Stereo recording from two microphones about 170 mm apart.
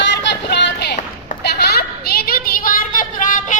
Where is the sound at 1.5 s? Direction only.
70° left (ahead or behind).